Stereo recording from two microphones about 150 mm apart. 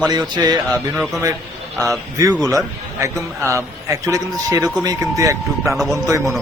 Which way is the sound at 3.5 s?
20° right (ahead or behind).